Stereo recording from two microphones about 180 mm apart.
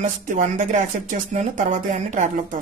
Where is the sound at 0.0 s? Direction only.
45° right (ahead or behind).